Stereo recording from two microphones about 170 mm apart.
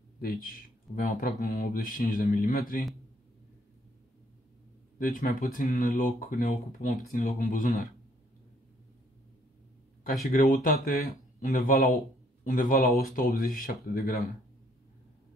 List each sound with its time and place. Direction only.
0.2 s speech: 60° left (ahead or behind)
4.9 s speech: 55° left (ahead or behind)
10.2 s speech: 55° left (ahead or behind)